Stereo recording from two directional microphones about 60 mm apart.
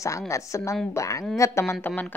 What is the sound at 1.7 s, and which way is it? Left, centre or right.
Speech, left.